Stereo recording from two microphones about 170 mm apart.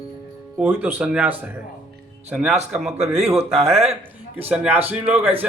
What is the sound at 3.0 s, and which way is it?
Speech, 35° right (ahead or behind).